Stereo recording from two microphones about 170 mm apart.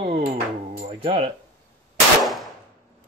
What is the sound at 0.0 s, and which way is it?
Music, 35° right (ahead or behind).